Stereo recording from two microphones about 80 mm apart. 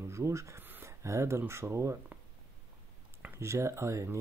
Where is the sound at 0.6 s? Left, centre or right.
Right.